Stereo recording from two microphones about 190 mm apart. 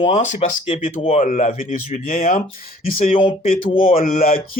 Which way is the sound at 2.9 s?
30° left (ahead or behind).